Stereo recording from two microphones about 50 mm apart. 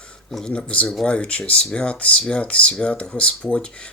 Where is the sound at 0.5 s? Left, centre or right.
Left.